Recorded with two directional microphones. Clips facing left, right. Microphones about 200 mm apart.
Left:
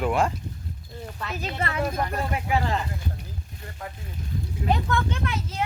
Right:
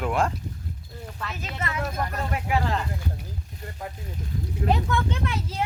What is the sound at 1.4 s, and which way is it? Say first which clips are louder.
Speech: left 4 dB; 35° left (ahead or behind).